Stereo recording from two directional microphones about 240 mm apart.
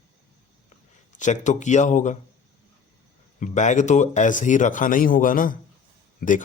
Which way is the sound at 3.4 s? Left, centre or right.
Left.